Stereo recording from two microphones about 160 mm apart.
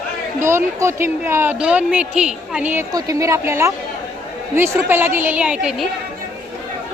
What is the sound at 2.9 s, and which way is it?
A woman's voice, 20° right (ahead or behind).